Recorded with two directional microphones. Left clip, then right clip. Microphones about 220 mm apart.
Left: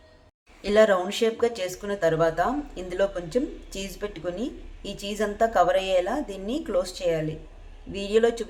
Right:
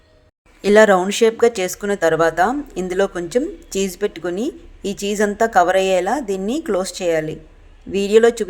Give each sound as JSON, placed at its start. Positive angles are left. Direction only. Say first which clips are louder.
{"t": 0.6, "sound": "speech", "louder": "right 8 dB", "side_deg": -45}